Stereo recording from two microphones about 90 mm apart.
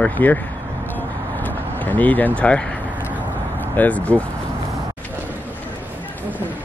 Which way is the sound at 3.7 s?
15° left (ahead or behind).